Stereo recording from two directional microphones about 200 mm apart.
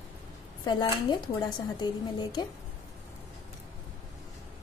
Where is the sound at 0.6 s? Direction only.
25° left (ahead or behind).